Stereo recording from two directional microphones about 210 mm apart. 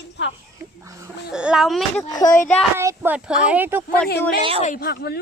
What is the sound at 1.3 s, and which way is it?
Speech, 5° right (ahead or behind).